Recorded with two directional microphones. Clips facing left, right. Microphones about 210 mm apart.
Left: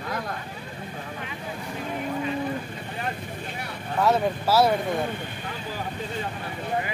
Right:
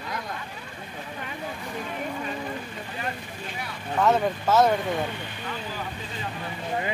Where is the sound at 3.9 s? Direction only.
10° left (ahead or behind).